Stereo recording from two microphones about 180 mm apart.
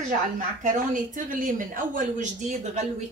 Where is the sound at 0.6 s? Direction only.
45° right (ahead or behind).